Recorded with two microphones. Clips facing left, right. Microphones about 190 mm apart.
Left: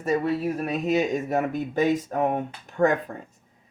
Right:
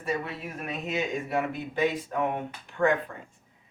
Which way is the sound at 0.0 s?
40° left (ahead or behind).